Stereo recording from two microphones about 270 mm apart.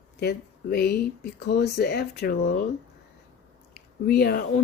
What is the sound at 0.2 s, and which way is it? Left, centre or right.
Speech, left.